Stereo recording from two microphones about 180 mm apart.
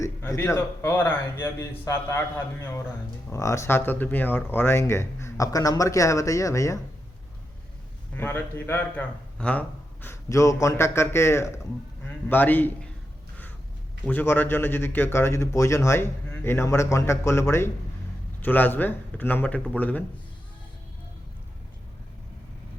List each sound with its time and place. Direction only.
0.0 s speech: 15° left (ahead or behind)
8.1 s a man's voice: 10° left (ahead or behind)
14.0 s speech: 10° left (ahead or behind)